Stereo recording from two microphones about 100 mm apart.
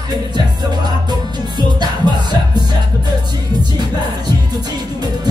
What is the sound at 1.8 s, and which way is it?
Music, 45° right (ahead or behind).